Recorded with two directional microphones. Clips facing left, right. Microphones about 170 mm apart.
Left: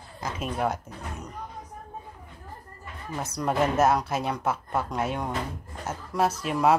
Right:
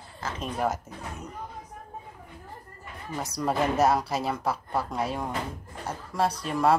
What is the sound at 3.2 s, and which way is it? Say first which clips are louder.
Speech: left 1 dB; centre (ahead or behind).